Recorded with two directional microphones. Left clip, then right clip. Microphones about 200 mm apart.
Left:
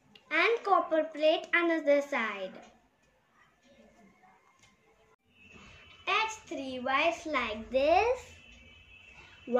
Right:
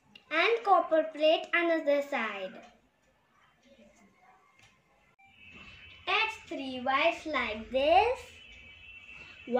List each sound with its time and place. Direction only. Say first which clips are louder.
0.1 s a woman's voice: even; centre (ahead or behind)
6.0 s a child's voice: right 1 dB; centre (ahead or behind)